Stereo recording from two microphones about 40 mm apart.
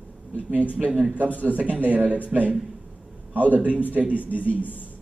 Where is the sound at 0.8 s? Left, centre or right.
Centre.